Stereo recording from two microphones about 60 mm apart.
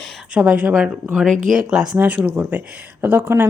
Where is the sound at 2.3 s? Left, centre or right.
Right.